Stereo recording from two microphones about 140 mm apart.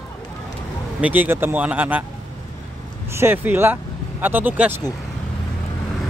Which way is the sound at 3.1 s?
15° right (ahead or behind).